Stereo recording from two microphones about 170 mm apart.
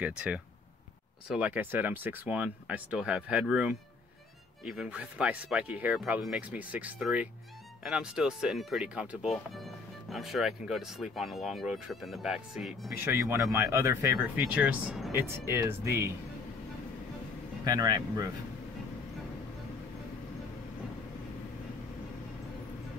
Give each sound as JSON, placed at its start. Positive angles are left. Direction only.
{"t": 1.3, "sound": "speech", "side_deg": -10}
{"t": 13.0, "sound": "speech", "side_deg": -15}
{"t": 17.6, "sound": "speech", "side_deg": -20}